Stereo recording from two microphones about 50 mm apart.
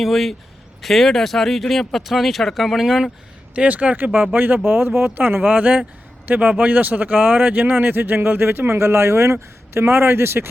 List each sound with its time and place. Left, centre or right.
0.0 s speech: centre
3.5 s a man's voice: right